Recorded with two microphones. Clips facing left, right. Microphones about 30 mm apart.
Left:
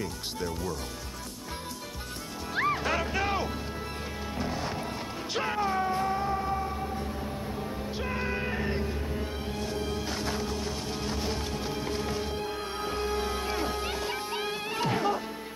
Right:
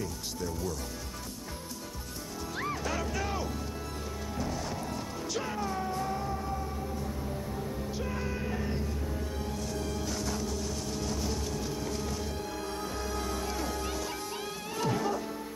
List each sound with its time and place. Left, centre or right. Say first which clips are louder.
0.0 s speech: left 2 dB; left
2.5 s music: left 7 dB; left